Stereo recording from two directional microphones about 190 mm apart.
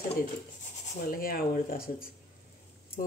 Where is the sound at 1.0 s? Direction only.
50° left (ahead or behind).